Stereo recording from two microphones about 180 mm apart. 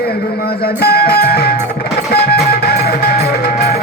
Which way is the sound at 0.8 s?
60° left (ahead or behind).